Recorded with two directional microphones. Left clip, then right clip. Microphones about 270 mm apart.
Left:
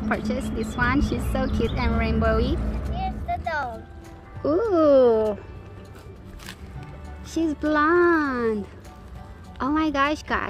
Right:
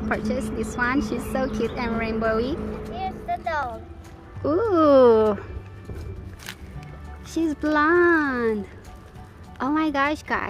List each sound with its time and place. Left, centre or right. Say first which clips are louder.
0.1 s a woman's voice: right 1 dB; centre
7.3 s speech: even; centre
9.6 s speech: even; centre